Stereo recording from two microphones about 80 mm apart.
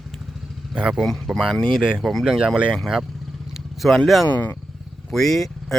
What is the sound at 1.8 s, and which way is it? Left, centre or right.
Speech, centre.